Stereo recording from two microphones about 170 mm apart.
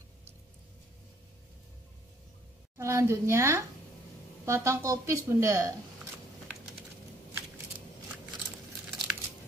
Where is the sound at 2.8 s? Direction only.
15° right (ahead or behind).